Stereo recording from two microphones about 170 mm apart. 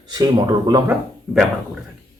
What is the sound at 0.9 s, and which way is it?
Speech, centre (ahead or behind).